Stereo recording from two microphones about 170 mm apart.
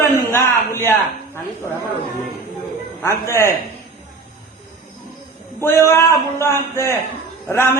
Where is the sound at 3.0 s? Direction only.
15° left (ahead or behind).